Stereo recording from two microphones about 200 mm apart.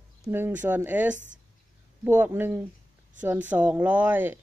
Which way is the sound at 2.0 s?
10° right (ahead or behind).